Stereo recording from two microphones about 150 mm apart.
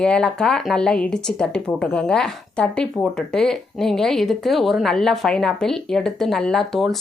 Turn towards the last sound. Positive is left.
turn(degrees=0)  # may be behind; listen again after turning